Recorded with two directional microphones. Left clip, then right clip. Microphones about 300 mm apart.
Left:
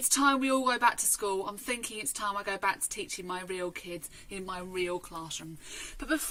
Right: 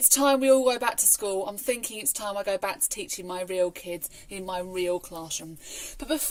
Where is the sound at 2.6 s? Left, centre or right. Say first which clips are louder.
Even; centre.